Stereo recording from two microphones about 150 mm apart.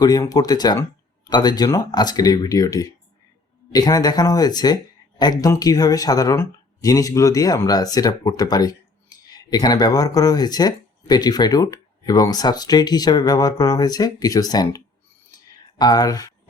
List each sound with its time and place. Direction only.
0.0 s speech: 25° left (ahead or behind)
15.8 s speech: 25° left (ahead or behind)